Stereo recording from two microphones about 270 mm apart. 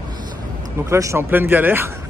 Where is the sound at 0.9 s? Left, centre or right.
Centre.